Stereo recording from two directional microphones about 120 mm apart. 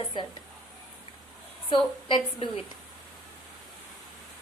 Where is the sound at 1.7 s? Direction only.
45° left (ahead or behind).